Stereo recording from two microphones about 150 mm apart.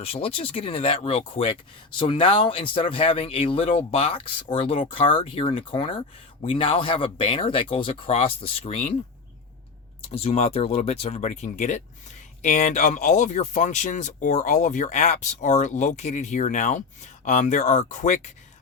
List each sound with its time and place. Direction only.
0.0 s speech: 40° left (ahead or behind)
10.1 s speech: 45° left (ahead or behind)